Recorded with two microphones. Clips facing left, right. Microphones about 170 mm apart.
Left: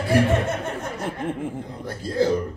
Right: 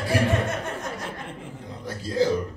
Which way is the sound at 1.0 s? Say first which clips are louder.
Left 8 dB; 50° left (ahead or behind).